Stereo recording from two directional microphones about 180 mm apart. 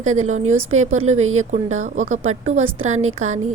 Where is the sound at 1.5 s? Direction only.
40° right (ahead or behind).